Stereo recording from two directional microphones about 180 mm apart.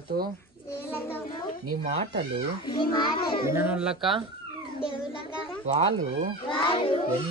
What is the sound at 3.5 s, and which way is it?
Speech, 10° right (ahead or behind).